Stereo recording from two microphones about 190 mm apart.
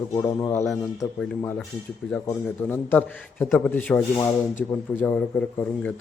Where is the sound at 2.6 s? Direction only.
10° left (ahead or behind).